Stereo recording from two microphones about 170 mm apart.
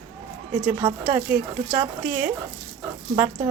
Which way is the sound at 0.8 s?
25° right (ahead or behind).